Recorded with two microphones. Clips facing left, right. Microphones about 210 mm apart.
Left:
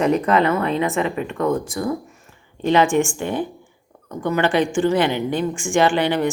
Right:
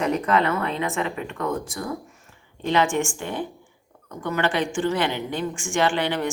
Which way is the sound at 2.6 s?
15° left (ahead or behind).